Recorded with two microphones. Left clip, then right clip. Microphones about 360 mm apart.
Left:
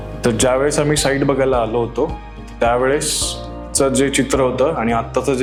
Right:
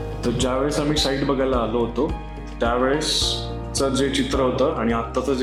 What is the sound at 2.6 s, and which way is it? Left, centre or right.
Speech, left.